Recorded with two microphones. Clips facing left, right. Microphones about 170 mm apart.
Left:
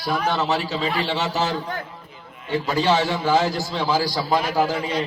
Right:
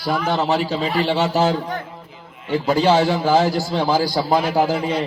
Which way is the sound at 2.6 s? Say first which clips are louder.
Right 5 dB; 50° right (ahead or behind).